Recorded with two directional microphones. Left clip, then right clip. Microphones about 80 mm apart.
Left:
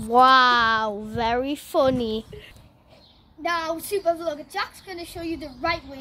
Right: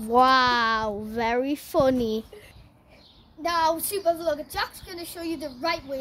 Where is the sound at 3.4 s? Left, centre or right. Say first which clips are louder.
Right 2 dB; right.